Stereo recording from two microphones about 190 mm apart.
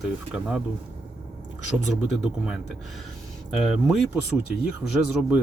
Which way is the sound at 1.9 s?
Centre (ahead or behind).